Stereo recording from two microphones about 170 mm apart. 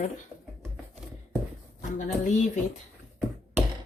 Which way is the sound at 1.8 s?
50° left (ahead or behind).